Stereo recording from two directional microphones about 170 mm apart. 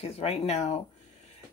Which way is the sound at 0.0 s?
35° left (ahead or behind).